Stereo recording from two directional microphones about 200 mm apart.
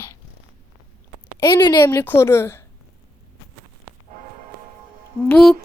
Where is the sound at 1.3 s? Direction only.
20° left (ahead or behind).